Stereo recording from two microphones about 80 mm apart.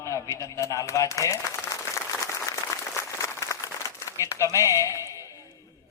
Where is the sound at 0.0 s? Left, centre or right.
Left.